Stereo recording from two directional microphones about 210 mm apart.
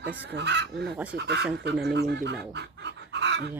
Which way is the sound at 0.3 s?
55° right (ahead or behind).